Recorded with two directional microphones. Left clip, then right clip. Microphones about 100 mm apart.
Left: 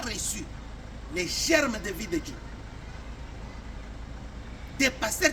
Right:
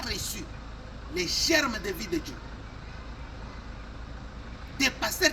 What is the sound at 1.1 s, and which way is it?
Speech, 35° left (ahead or behind).